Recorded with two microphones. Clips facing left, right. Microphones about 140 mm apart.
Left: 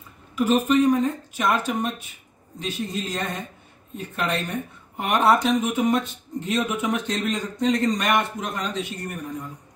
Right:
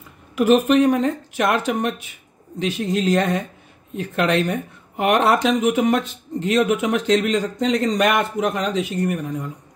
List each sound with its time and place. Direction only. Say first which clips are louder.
0.4 s speech: right 4 dB; 75° right (ahead or behind); by 9.2 s 90° right